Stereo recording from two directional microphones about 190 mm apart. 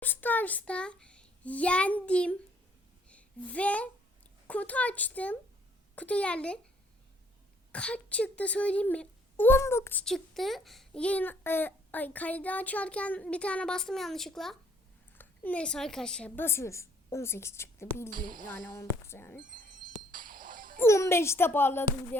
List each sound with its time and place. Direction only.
0.0 s a child's voice: 10° left (ahead or behind)
7.7 s a woman's voice: 5° left (ahead or behind)
18.1 s speech: 45° right (ahead or behind)
18.5 s a woman's voice: 15° left (ahead or behind)
20.1 s music: 45° right (ahead or behind)
20.7 s a woman's voice: 15° left (ahead or behind)